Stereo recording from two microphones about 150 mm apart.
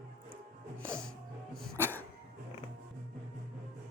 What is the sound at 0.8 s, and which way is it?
Music, 5° left (ahead or behind).